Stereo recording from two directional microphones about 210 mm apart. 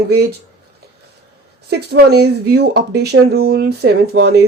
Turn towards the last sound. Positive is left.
turn(degrees=-50)  # may be behind; listen again after turning